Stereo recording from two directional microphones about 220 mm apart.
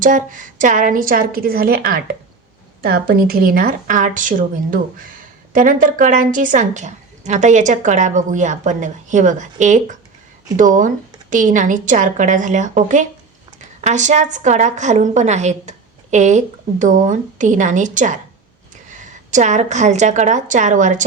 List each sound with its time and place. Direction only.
0.0 s a woman's voice: 35° right (ahead or behind)